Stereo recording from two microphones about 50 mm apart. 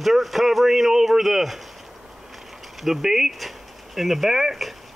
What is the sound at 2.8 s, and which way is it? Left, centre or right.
Speech, centre.